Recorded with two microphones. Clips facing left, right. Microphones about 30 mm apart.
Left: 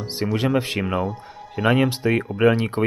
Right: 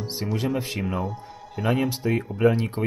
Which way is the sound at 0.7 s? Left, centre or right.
Left.